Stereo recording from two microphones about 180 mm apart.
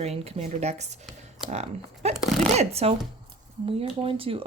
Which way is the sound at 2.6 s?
35° right (ahead or behind).